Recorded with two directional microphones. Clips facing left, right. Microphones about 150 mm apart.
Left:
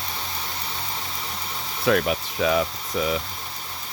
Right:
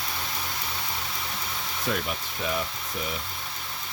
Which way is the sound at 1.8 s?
85° left.